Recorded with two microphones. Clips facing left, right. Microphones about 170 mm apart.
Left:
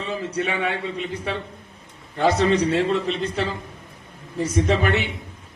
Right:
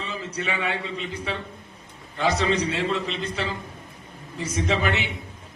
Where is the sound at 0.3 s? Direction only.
55° left (ahead or behind).